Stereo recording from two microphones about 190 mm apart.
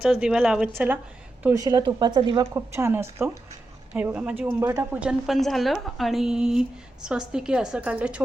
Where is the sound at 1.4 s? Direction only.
15° right (ahead or behind).